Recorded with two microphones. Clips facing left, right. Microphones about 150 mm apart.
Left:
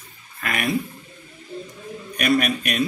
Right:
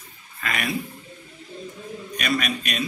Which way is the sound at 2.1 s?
55° left (ahead or behind).